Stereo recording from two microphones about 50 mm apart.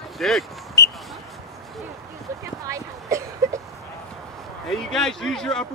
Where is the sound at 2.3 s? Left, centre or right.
Right.